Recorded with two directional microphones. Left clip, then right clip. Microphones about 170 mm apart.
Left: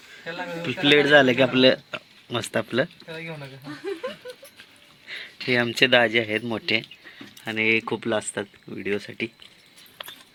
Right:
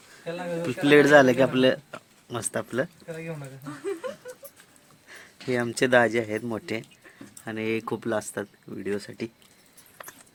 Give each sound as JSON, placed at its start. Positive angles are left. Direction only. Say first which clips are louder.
{"t": 0.6, "sound": "speech", "louder": "even", "side_deg": -5}
{"t": 1.6, "sound": "speech", "louder": "left 4 dB", "side_deg": 15}
{"t": 5.2, "sound": "speech", "louder": "left 5 dB", "side_deg": 5}